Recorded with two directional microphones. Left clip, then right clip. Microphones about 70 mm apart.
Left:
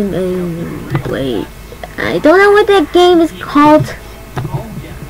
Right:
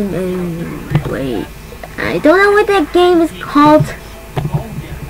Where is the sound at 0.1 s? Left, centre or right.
Centre.